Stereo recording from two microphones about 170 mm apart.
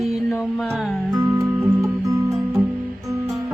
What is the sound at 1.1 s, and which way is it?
Music, 20° right (ahead or behind).